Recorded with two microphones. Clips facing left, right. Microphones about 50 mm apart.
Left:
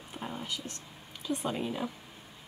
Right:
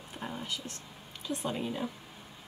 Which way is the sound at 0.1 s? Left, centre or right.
Centre.